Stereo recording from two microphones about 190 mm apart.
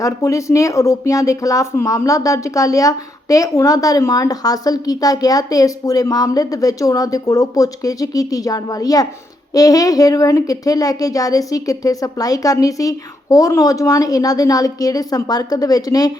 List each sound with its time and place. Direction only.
0.0 s speech: 15° left (ahead or behind)